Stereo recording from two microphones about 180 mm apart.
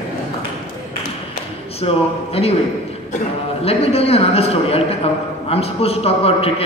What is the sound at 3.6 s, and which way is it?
A man's voice, 35° left (ahead or behind).